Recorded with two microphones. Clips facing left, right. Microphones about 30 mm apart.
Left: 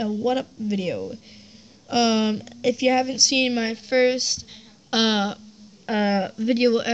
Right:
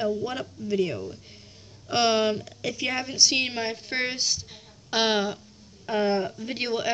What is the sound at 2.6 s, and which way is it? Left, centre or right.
Speech, left.